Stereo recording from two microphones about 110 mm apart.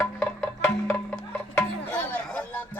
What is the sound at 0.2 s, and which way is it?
Music, 5° left (ahead or behind).